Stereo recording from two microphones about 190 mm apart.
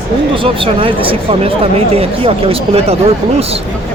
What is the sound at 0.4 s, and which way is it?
Speech, 30° right (ahead or behind).